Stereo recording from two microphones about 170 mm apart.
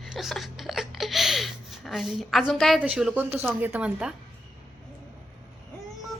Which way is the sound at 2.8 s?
5° right (ahead or behind).